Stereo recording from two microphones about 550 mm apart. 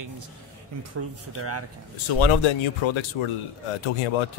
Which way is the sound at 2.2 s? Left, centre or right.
Left.